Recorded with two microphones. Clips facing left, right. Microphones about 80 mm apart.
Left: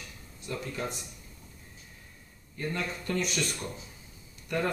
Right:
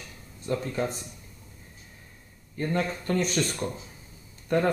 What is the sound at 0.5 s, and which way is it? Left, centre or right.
Speech, right.